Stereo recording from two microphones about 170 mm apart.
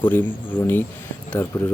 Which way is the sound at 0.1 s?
10° left (ahead or behind).